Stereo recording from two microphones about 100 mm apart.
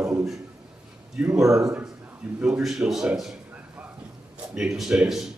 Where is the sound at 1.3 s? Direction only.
30° right (ahead or behind).